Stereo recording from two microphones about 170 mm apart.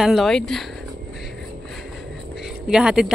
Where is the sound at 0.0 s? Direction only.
Centre (ahead or behind).